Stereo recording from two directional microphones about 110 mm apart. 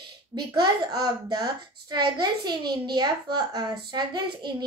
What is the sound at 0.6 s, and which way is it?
A child's voice, 40° right (ahead or behind).